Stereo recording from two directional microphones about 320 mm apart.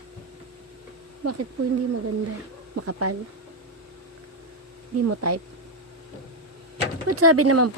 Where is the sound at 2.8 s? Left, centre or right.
Right.